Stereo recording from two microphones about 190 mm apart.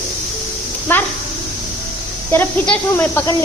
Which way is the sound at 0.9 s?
10° left (ahead or behind).